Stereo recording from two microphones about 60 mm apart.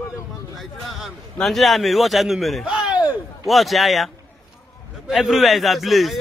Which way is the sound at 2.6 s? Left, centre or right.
Centre.